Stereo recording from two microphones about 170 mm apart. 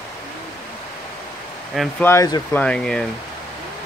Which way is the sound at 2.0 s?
20° left (ahead or behind).